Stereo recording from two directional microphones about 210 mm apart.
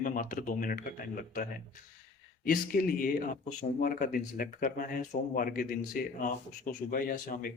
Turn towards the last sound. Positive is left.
turn(degrees=40)  # may be behind; listen again after turning